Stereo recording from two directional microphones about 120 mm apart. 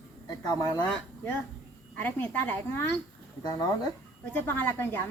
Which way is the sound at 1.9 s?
15° left (ahead or behind).